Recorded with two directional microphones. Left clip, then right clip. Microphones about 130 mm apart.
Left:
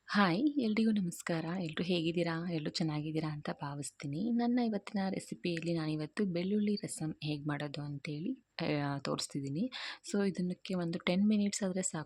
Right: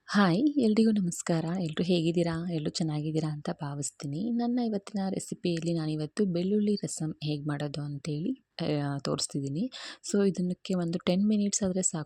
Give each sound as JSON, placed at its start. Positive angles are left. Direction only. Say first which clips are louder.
{"t": 0.1, "sound": "speech", "louder": "right 5 dB", "side_deg": -60}